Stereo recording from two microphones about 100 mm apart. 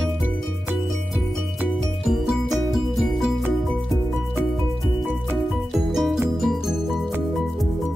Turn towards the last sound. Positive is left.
turn(degrees=0)  # may be behind; listen again after turning